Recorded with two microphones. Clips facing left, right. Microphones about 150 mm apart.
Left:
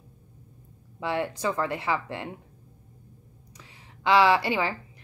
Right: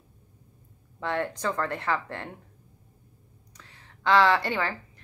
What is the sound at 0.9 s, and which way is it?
A woman's voice, 10° left (ahead or behind).